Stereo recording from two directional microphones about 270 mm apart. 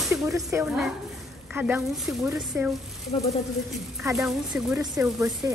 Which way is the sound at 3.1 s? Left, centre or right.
Left.